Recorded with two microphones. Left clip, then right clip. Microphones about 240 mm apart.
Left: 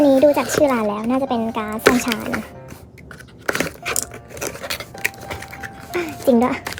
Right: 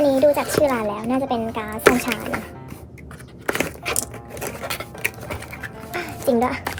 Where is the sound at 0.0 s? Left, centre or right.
Left.